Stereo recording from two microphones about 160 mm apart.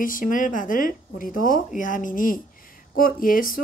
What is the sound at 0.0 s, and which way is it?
Speech, 60° left (ahead or behind).